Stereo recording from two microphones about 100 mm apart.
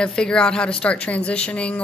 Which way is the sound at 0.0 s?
10° left (ahead or behind).